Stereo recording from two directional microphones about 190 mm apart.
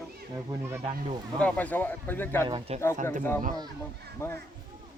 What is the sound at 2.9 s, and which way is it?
Speech, 40° right (ahead or behind).